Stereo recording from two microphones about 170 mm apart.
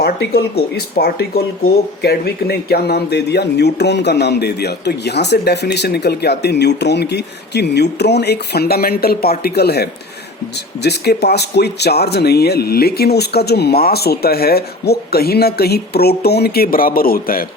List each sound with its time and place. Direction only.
0.0 s speech: 70° left (ahead or behind)